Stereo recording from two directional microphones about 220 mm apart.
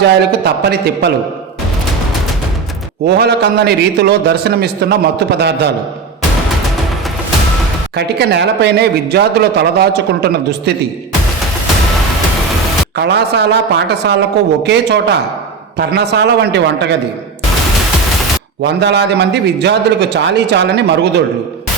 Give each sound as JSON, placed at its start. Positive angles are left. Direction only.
{"t": 0.0, "sound": "a man's voice", "side_deg": -50}
{"t": 3.1, "sound": "a man's voice", "side_deg": -50}
{"t": 7.9, "sound": "a man's voice", "side_deg": -50}
{"t": 13.0, "sound": "a man's voice", "side_deg": -50}
{"t": 18.6, "sound": "a man's voice", "side_deg": -50}